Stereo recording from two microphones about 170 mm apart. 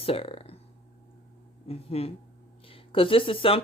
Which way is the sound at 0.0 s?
35° left (ahead or behind).